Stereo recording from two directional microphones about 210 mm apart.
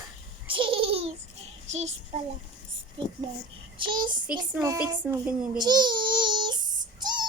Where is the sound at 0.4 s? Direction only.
25° right (ahead or behind).